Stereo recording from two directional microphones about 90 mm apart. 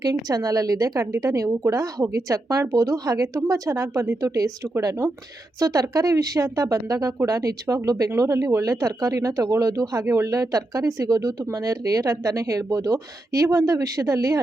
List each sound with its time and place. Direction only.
0.0 s speech: 45° right (ahead or behind)